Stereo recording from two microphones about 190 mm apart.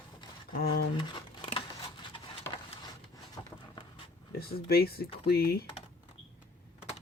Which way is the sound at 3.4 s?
15° left (ahead or behind).